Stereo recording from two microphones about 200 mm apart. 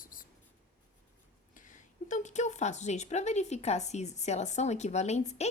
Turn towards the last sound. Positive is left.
turn(degrees=35)  # may be behind; listen again after turning